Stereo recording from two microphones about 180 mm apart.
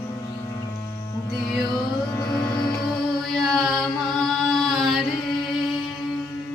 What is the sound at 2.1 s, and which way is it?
Music, 20° left (ahead or behind).